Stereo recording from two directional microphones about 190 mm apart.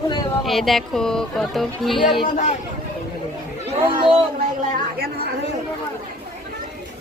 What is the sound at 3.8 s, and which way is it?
Speech, 25° right (ahead or behind).